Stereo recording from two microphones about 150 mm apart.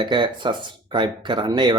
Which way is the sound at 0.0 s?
30° right (ahead or behind).